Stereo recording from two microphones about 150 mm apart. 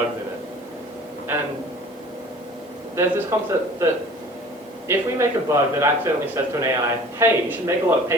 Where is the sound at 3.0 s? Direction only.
20° right (ahead or behind).